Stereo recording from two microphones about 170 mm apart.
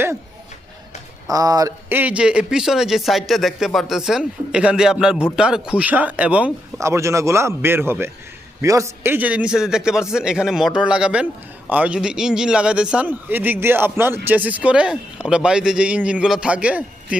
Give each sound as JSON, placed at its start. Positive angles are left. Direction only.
{"t": 1.3, "sound": "a man's voice", "side_deg": -20}